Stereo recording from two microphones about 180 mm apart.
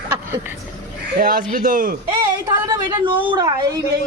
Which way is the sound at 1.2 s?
50° right (ahead or behind).